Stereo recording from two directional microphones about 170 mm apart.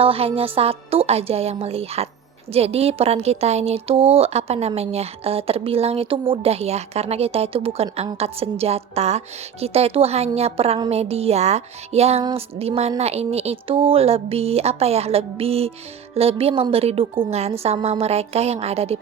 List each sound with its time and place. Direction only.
0.0 s speech: 35° right (ahead or behind)